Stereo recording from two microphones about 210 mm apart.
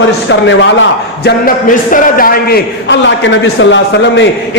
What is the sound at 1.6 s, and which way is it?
A man's voice, 40° left (ahead or behind).